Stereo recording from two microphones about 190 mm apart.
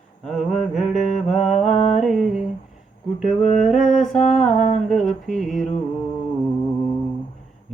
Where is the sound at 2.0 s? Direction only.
Centre (ahead or behind).